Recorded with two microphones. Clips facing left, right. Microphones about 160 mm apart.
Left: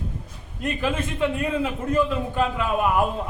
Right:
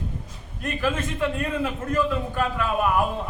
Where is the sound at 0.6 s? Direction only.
20° left (ahead or behind).